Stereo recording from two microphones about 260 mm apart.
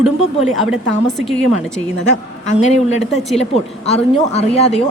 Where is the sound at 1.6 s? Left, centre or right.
Centre.